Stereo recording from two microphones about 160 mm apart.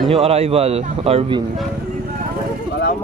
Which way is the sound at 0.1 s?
40° right (ahead or behind).